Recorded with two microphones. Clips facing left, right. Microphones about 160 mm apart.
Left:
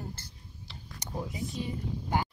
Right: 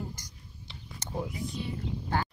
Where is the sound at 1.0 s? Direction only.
15° left (ahead or behind).